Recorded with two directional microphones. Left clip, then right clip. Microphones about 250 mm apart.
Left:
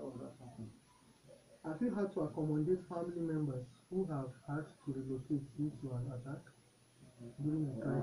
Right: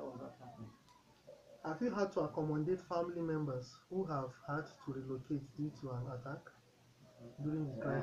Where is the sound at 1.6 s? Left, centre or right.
Right.